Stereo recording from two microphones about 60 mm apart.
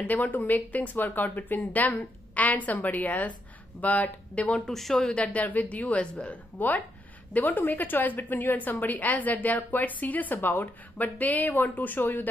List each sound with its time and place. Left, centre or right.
0.0 s speech: left
4.5 s speech: centre
4.7 s speech: centre
5.1 s a woman's voice: left